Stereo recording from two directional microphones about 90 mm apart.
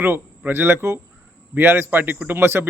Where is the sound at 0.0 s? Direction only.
20° right (ahead or behind).